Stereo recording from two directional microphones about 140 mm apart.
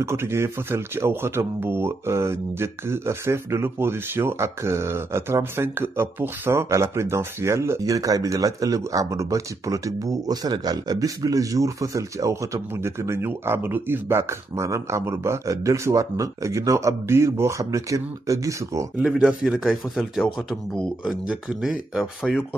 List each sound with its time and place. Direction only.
0.0 s speech: 20° right (ahead or behind)
18.9 s speech: 5° right (ahead or behind)